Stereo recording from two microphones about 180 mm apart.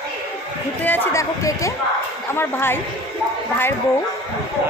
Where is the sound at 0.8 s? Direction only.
15° left (ahead or behind).